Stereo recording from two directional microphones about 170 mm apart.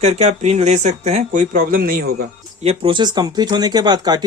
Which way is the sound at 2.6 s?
35° right (ahead or behind).